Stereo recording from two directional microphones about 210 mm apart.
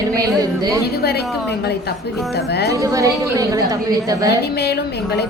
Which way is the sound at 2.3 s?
50° left (ahead or behind).